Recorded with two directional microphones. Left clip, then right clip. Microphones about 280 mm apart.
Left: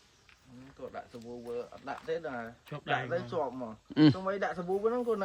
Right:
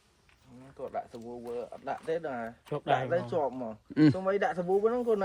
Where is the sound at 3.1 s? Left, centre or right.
Right.